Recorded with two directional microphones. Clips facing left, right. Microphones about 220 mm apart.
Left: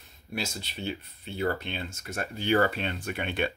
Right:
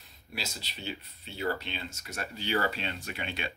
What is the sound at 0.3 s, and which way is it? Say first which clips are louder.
Speech: left 6 dB; 50° left (ahead or behind).